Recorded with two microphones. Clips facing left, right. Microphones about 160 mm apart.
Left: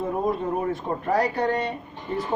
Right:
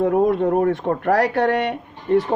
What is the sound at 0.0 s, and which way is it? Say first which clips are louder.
A man's voice: right 8 dB; 75° right (ahead or behind).